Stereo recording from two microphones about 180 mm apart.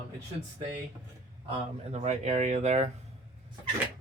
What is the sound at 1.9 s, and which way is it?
Speech, 40° right (ahead or behind).